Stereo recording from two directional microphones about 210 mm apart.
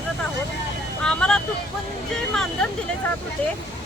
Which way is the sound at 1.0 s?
5° left (ahead or behind).